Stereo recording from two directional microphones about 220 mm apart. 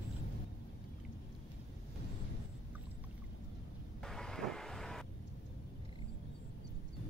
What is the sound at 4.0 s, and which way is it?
Vehicle, centre (ahead or behind).